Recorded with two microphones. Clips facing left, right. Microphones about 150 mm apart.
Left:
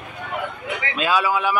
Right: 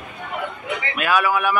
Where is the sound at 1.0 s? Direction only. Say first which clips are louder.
Right 1 dB; 20° left (ahead or behind).